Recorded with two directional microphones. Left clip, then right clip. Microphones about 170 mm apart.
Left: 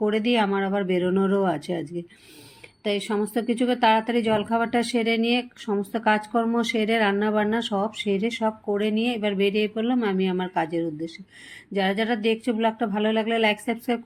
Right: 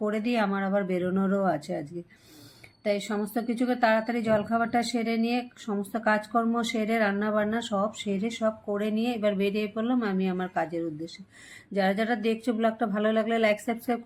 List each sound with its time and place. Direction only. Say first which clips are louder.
0.0 s a woman's voice: left 5 dB; 15° left (ahead or behind)